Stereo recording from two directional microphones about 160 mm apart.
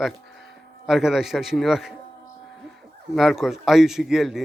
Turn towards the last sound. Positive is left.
turn(degrees=0)  # may be behind; listen again after turning